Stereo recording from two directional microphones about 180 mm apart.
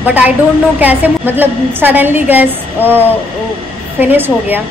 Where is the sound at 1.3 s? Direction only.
10° right (ahead or behind).